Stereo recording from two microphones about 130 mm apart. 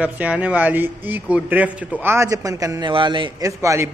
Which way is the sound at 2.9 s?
40° right (ahead or behind).